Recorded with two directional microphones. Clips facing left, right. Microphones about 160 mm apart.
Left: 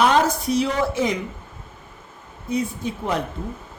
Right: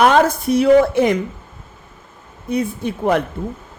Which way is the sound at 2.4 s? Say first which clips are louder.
Right 4 dB; 60° right (ahead or behind).